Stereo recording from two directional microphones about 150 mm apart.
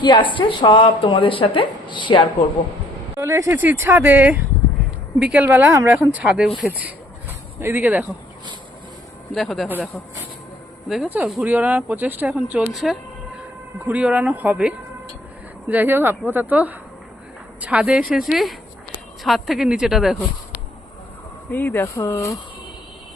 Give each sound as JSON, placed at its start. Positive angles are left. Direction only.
{"t": 0.0, "sound": "a woman's voice", "side_deg": 30}
{"t": 3.2, "sound": "speech", "side_deg": -20}
{"t": 9.3, "sound": "a woman's voice", "side_deg": 0}
{"t": 10.8, "sound": "a woman's voice", "side_deg": 0}
{"t": 21.5, "sound": "speech", "side_deg": 15}